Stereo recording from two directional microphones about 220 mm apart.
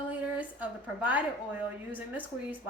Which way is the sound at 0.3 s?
5° right (ahead or behind).